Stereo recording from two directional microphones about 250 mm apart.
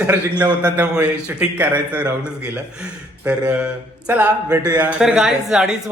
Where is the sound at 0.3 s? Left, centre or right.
Centre.